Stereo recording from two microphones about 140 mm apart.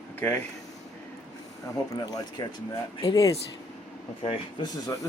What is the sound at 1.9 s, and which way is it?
Speech, 25° left (ahead or behind).